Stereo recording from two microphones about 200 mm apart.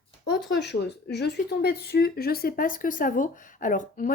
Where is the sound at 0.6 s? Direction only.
55° left (ahead or behind).